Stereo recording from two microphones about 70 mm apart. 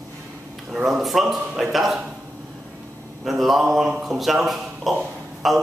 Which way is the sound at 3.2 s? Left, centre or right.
Centre.